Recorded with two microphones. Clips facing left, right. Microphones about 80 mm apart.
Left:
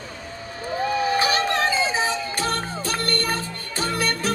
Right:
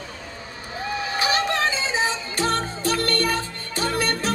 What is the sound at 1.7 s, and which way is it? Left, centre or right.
Music, right.